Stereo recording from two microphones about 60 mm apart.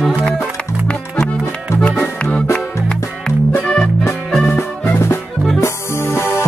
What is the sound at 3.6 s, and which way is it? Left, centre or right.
Music, centre.